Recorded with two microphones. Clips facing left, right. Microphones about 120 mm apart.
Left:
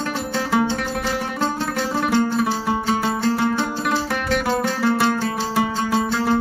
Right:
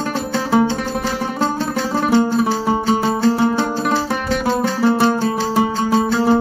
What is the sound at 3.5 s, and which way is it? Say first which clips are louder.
Music: right 4 dB; 35° right (ahead or behind).